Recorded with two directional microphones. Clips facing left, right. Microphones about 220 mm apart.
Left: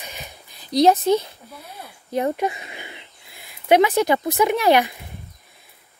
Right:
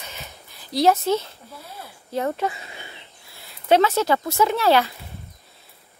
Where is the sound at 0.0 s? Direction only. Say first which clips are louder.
Left 2 dB; 15° left (ahead or behind).